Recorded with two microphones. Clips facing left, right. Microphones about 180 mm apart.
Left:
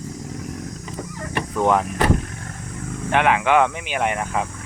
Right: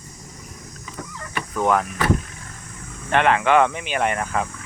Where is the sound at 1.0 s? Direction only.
50° left (ahead or behind).